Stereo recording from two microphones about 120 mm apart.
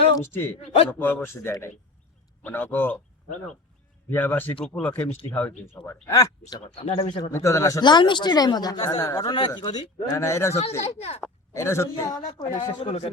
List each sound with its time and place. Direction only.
0.2 s speech: 20° left (ahead or behind)
4.1 s speech: 15° left (ahead or behind)
6.1 s speech: 30° left (ahead or behind)
6.5 s speech: 45° left (ahead or behind)
7.3 s speech: 25° left (ahead or behind)
7.8 s a man's voice: 40° left (ahead or behind)
10.8 s speech: 60° left (ahead or behind)
11.5 s a man's voice: 25° left (ahead or behind)
12.8 s speech: 65° left (ahead or behind)